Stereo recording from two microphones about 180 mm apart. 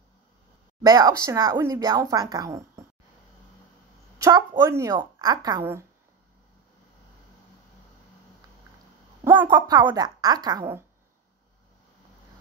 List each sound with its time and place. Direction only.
0.8 s speech: 20° right (ahead or behind)
4.2 s a woman's voice: 20° right (ahead or behind)
9.2 s a sound: 10° right (ahead or behind)
9.5 s speech: 20° right (ahead or behind)